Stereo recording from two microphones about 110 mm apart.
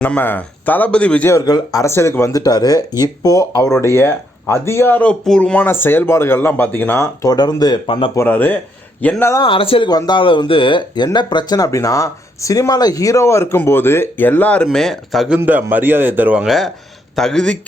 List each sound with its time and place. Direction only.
0.0 s speech: 15° left (ahead or behind)
1.3 s speech: 35° left (ahead or behind)
7.9 s speech: 50° left (ahead or behind)
8.1 s speech: 20° left (ahead or behind)
9.4 s speech: 55° left (ahead or behind)
9.9 s speech: 45° left (ahead or behind); by 15.3 s centre (ahead or behind)
15.4 s speech: 15° right (ahead or behind)
16.5 s speech: centre (ahead or behind)